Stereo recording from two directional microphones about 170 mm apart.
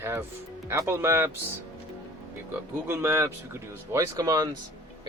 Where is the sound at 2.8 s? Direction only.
15° right (ahead or behind).